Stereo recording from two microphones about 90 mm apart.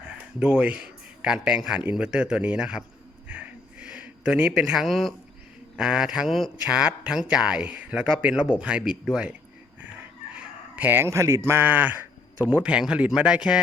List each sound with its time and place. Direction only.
0.3 s speech: 10° right (ahead or behind)
3.2 s a sound: 15° right (ahead or behind)
5.7 s speech: 10° right (ahead or behind)
6.7 s speech: 10° right (ahead or behind)
10.3 s speech: 20° right (ahead or behind)